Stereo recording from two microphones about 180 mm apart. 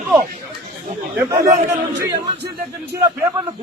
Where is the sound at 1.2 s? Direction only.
15° right (ahead or behind).